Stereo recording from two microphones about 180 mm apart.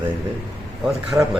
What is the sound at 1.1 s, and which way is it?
Speech, 15° right (ahead or behind).